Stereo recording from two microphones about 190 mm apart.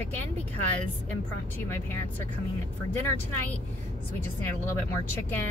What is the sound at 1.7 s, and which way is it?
Speech, 10° left (ahead or behind).